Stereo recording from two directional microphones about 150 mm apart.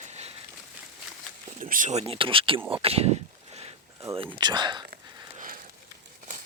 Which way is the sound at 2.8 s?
45° right (ahead or behind).